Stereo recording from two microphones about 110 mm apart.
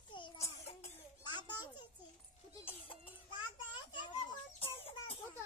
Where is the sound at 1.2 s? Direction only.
45° left (ahead or behind).